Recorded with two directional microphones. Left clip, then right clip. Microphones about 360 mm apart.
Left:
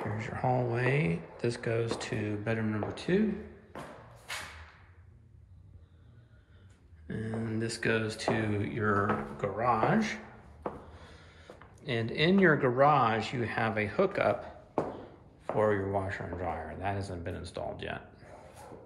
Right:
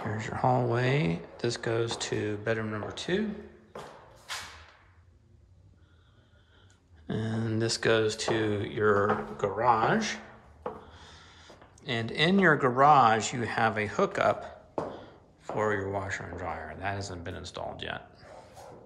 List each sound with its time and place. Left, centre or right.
0.2 s speech: centre
7.1 s speech: centre